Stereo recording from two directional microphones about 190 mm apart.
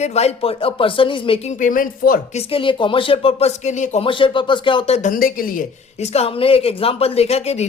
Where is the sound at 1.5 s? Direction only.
45° left (ahead or behind).